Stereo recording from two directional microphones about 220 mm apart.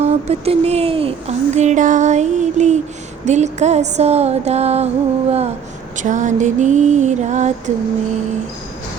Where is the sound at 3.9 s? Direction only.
30° right (ahead or behind).